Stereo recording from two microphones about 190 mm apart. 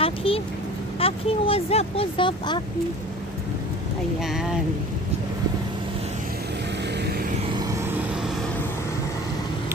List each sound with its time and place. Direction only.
0.0 s vehicle: 30° left (ahead or behind)
0.9 s speech: 30° left (ahead or behind)
4.2 s speech: centre (ahead or behind)